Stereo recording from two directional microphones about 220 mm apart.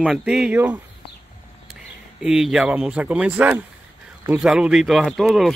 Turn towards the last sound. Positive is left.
turn(degrees=0)  # may be behind; listen again after turning